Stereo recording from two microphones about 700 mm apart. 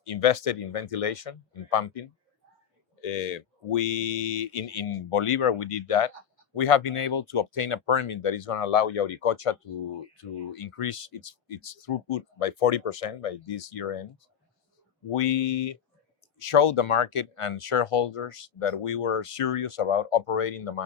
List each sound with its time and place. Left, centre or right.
0.0 s speech: left
15.1 s speech: left